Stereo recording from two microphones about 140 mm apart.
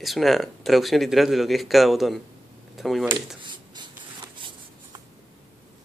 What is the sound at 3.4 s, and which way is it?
Writing, 35° right (ahead or behind).